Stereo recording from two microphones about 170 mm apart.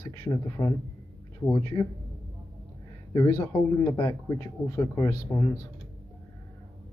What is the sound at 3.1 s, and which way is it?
Speech, 25° left (ahead or behind).